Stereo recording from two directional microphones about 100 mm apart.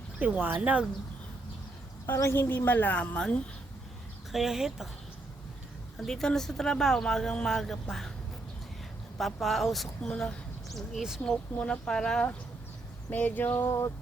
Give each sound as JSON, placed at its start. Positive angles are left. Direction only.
{"t": 0.2, "sound": "speech", "side_deg": -15}
{"t": 2.0, "sound": "a woman's voice", "side_deg": 25}
{"t": 4.3, "sound": "speech", "side_deg": 0}
{"t": 6.0, "sound": "speech", "side_deg": 5}
{"t": 9.1, "sound": "speech", "side_deg": 0}
{"t": 11.2, "sound": "a woman's voice", "side_deg": 10}